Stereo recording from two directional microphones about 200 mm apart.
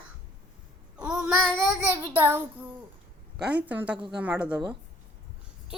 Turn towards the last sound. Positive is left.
turn(degrees=-5)  # may be behind; listen again after turning